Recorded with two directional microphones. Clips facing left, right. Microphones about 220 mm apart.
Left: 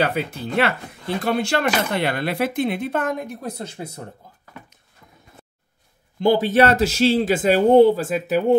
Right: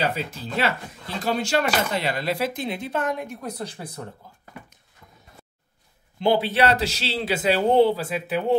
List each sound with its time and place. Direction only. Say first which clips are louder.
0.0 s speech: left 4 dB; 60° left (ahead or behind)
3.3 s speech: left 2 dB; 30° left (ahead or behind)
6.2 s a man's voice: left 4 dB; 45° left (ahead or behind)